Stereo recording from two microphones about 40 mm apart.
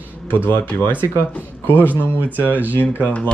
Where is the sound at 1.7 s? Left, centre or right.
Left.